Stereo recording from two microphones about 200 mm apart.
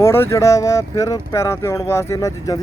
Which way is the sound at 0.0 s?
15° left (ahead or behind).